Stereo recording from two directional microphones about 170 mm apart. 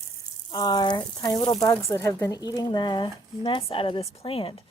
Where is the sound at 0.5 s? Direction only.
25° left (ahead or behind).